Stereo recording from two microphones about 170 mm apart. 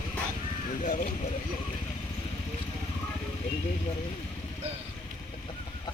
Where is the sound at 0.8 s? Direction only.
50° left (ahead or behind).